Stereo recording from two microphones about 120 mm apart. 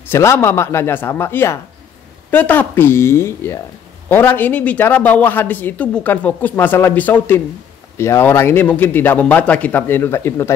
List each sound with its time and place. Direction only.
0.1 s speech: 20° left (ahead or behind)